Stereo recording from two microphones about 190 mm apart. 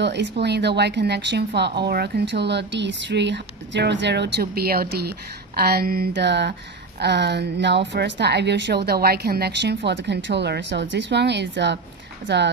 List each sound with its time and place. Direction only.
0.0 s a woman's voice: 65° right (ahead or behind)